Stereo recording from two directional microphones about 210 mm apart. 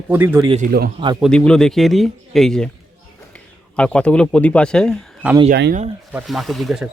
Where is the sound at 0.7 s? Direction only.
45° right (ahead or behind).